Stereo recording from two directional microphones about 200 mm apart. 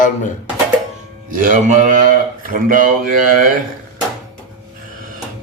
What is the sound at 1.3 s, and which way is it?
A man's voice, 40° right (ahead or behind).